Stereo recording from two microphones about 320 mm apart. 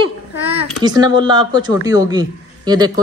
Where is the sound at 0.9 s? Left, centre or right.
Centre.